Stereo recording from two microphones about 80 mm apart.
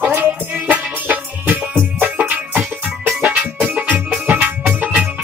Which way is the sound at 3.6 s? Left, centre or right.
Centre.